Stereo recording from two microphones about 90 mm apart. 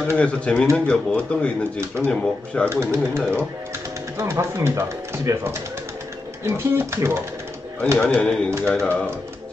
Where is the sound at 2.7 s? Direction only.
30° right (ahead or behind).